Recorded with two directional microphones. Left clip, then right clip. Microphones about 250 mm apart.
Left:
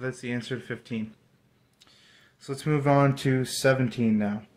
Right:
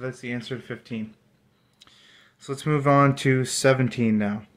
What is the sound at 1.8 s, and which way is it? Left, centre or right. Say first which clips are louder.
Speech: right 4 dB; centre.